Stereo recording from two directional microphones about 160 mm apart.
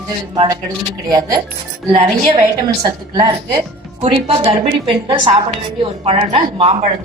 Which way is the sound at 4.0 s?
40° right (ahead or behind).